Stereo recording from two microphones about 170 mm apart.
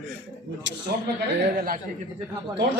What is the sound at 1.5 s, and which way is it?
Speech, 60° right (ahead or behind).